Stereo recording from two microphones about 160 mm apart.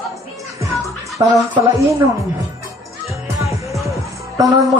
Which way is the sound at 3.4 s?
20° right (ahead or behind).